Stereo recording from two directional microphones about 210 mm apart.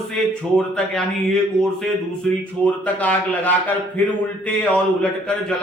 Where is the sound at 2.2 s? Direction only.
5° left (ahead or behind).